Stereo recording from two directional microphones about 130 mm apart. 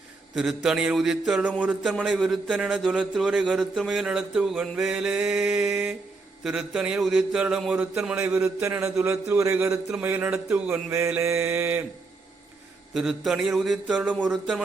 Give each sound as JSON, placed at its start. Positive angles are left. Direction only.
{"t": 0.3, "sound": "a man's voice", "side_deg": -5}
{"t": 12.9, "sound": "a man's voice", "side_deg": 0}